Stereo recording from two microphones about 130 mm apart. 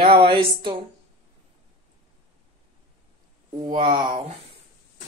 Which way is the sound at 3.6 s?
40° right (ahead or behind).